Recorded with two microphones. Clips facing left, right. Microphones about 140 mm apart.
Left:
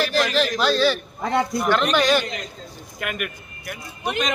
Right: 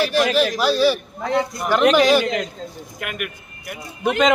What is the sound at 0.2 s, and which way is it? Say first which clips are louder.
A man's voice: right 4 dB; 10° right (ahead or behind).